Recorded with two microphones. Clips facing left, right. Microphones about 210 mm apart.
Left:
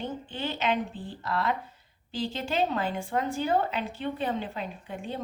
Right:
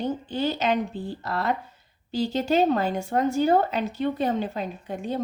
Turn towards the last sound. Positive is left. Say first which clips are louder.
# right 6 dB
turn(degrees=-40)  # may be behind; listen again after turning